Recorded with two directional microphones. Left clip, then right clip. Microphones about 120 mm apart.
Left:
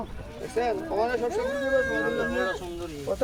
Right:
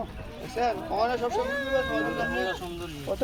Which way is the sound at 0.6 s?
55° left (ahead or behind).